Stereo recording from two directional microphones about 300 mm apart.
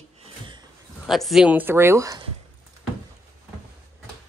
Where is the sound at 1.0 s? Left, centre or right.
Centre.